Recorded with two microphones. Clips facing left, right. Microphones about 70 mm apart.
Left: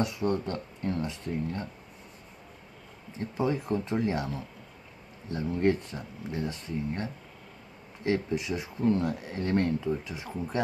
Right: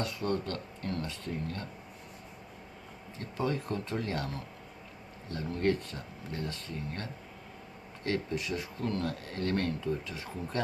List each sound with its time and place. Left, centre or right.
0.0 s speech: centre
3.2 s speech: centre